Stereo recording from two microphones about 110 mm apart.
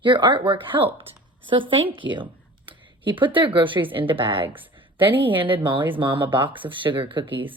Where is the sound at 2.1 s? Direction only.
50° right (ahead or behind).